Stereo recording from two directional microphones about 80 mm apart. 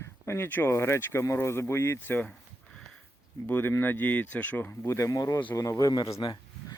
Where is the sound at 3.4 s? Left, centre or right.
Left.